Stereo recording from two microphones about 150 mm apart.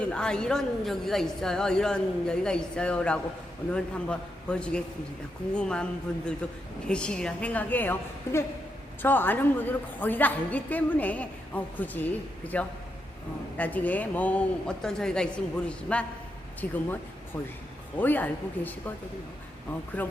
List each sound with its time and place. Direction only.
0.0 s a woman's voice: 5° left (ahead or behind)
17.9 s a woman's voice: 10° left (ahead or behind)
20.0 s a woman's voice: 10° left (ahead or behind)